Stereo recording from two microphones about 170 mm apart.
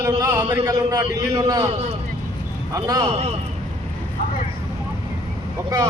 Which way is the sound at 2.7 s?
20° right (ahead or behind).